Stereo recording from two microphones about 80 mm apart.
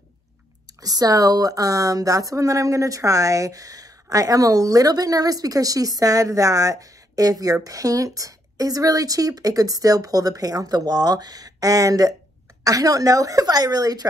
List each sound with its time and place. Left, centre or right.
0.7 s speech: right